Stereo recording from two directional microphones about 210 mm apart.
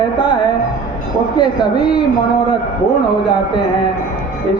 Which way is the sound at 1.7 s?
20° left (ahead or behind).